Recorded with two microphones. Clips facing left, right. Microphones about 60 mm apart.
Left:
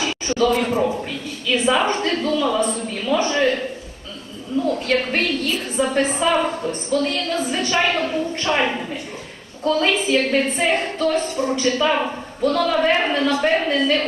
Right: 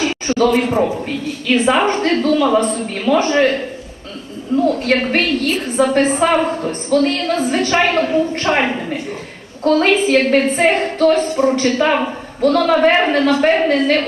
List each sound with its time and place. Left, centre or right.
0.0 s a sound: right
1.5 s a woman's voice: right
4.8 s a woman's voice: right